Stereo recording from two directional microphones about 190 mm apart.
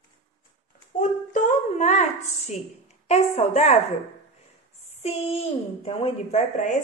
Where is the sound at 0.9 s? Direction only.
40° left (ahead or behind).